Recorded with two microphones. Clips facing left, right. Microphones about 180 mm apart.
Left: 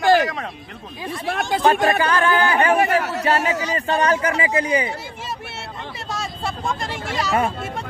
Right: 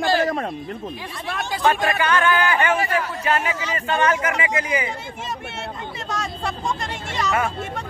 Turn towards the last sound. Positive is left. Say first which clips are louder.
# left 2 dB
turn(degrees=35)  # may be behind; listen again after turning